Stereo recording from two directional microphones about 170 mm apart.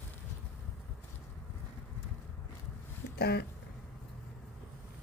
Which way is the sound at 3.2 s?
75° left (ahead or behind).